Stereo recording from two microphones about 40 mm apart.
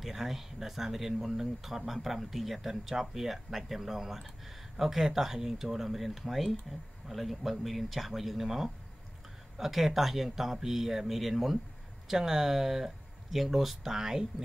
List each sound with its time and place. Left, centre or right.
0.0 s speech: centre